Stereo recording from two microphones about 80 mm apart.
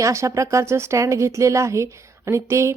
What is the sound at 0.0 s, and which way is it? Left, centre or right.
Speech, right.